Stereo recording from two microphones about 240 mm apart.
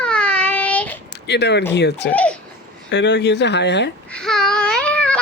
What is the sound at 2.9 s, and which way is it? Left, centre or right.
Speech, left.